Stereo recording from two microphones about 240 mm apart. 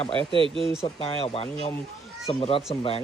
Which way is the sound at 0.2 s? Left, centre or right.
Right.